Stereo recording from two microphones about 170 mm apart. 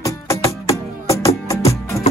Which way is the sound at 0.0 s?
20° left (ahead or behind).